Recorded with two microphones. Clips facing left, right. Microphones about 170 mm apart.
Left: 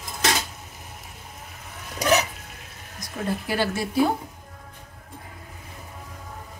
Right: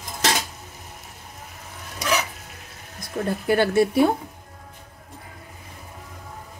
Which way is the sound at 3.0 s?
55° right (ahead or behind).